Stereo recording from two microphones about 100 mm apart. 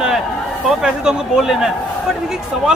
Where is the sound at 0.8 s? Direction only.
5° right (ahead or behind).